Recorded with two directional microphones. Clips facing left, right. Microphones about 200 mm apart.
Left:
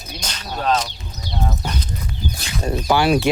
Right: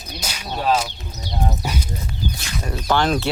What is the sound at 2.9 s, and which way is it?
Speech, 10° left (ahead or behind).